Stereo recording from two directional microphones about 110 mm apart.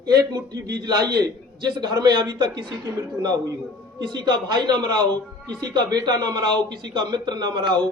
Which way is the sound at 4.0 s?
40° right (ahead or behind).